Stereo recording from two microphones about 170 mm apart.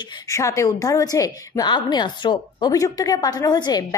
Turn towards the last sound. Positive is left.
turn(degrees=25)  # may be behind; listen again after turning